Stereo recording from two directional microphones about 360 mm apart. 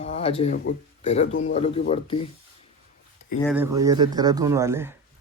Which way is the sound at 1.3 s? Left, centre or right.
Left.